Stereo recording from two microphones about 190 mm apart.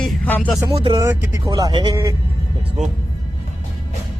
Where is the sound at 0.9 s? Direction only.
15° right (ahead or behind).